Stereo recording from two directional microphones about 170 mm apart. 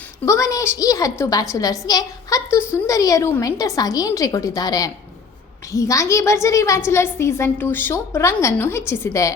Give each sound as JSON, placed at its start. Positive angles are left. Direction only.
{"t": 0.3, "sound": "a woman's voice", "side_deg": 20}